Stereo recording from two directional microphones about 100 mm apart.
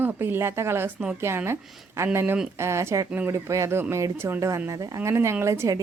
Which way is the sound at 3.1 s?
20° right (ahead or behind).